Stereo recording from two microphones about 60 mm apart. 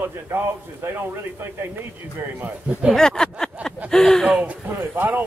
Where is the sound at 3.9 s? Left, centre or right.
Centre.